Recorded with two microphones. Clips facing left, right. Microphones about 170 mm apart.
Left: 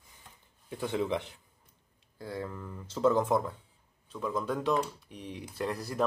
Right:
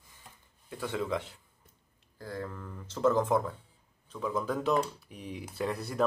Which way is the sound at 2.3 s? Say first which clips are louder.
Left 1 dB; 5° left (ahead or behind).